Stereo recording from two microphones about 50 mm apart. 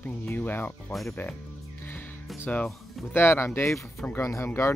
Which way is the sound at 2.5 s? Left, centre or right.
Left.